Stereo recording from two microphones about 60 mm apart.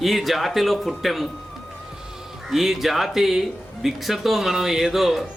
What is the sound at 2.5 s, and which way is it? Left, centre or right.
Speech, centre.